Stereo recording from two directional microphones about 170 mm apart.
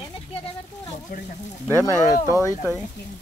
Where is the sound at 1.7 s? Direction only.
15° left (ahead or behind).